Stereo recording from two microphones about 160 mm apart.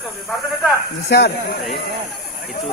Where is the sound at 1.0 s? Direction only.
90° left.